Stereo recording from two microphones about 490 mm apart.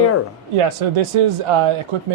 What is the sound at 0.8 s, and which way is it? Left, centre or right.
Speech, right.